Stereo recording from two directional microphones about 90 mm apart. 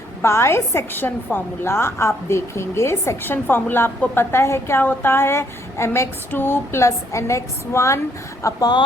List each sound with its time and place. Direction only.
0.2 s a woman's voice: 30° left (ahead or behind)